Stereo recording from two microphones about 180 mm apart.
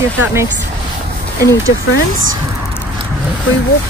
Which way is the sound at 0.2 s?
15° right (ahead or behind).